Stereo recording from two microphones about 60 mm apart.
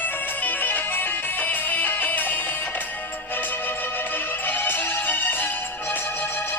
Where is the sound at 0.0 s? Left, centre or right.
Left.